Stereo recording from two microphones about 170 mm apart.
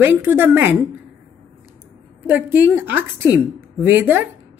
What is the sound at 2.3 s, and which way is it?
A woman's voice, 10° right (ahead or behind).